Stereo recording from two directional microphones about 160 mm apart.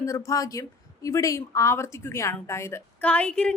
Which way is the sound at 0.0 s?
20° left (ahead or behind).